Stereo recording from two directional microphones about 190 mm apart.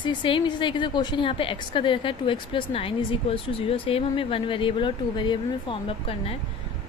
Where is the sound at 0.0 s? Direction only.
25° left (ahead or behind).